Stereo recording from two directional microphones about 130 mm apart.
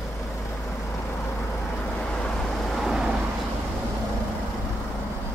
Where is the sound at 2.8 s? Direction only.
Centre (ahead or behind).